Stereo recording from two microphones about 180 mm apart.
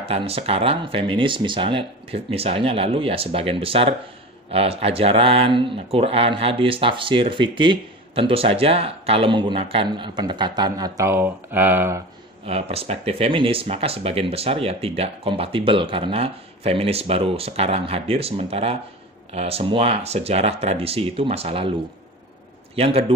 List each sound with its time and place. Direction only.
0.1 s speech: 30° right (ahead or behind); by 12.0 s 10° right (ahead or behind)
12.4 s speech: 35° right (ahead or behind)
22.8 s speech: 30° right (ahead or behind)